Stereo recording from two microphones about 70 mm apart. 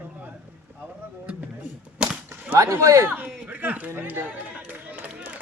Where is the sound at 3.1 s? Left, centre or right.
Right.